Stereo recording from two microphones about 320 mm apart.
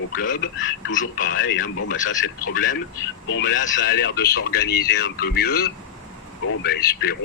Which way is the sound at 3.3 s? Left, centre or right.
Left.